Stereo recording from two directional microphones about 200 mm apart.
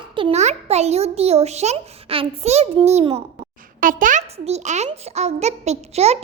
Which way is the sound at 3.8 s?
40° right (ahead or behind).